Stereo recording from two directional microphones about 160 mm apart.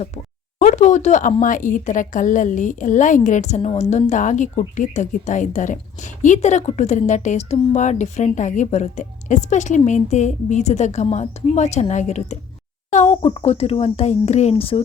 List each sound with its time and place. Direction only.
0.6 s a woman's voice: 50° left (ahead or behind)